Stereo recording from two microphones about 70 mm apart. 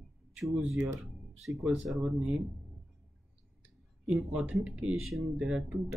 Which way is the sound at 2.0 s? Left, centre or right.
Centre.